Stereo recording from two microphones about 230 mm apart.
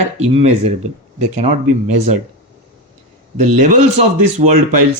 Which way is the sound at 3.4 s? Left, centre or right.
Right.